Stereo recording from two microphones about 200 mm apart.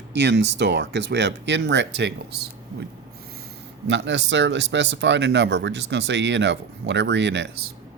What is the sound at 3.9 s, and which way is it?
Speech, 65° right (ahead or behind).